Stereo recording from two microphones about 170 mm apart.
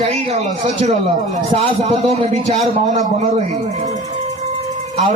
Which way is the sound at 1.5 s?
35° right (ahead or behind).